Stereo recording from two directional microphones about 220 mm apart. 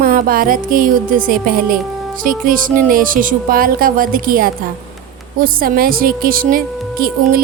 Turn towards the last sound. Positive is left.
turn(degrees=-40)  # may be behind; listen again after turning